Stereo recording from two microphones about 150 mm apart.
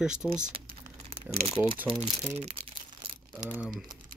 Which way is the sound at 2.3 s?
45° right (ahead or behind).